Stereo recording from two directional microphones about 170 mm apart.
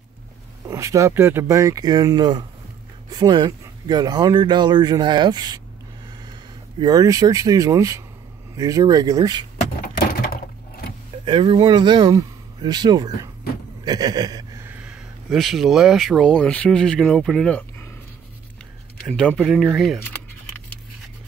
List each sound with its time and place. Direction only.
0.7 s speech: 20° right (ahead or behind)
6.8 s speech: 20° right (ahead or behind)
9.8 s a sound: 55° left (ahead or behind)
11.2 s speech: 30° right (ahead or behind); by 17.8 s 5° left (ahead or behind)
19.0 s speech: 5° left (ahead or behind)
20.1 s keys jangling: 10° left (ahead or behind)